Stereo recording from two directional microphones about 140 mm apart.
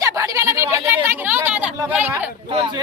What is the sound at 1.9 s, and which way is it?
Speech, 10° right (ahead or behind).